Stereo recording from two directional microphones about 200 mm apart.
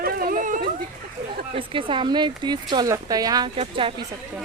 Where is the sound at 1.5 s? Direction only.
25° right (ahead or behind).